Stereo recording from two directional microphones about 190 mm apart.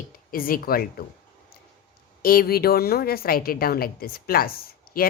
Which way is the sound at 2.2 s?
50° left (ahead or behind).